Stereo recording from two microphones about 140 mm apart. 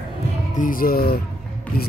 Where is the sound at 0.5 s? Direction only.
80° left.